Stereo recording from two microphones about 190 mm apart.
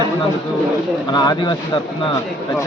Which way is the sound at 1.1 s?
25° left (ahead or behind).